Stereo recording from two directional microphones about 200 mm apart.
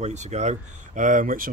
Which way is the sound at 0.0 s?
35° right (ahead or behind).